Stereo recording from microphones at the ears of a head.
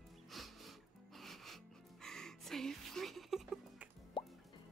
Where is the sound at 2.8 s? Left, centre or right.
Right.